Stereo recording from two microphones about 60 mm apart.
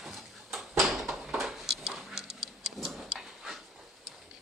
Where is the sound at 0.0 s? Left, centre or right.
Centre.